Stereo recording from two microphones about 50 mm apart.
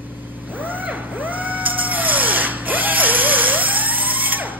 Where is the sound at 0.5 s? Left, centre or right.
Right.